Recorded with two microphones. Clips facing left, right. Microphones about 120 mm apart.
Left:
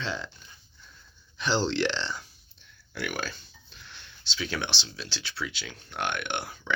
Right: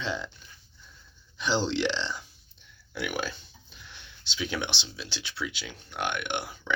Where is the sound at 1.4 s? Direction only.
10° right (ahead or behind).